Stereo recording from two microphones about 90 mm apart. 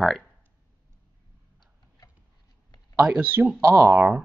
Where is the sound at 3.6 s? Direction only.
30° right (ahead or behind).